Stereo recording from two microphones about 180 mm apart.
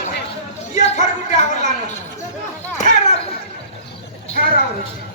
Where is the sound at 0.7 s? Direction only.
40° left (ahead or behind).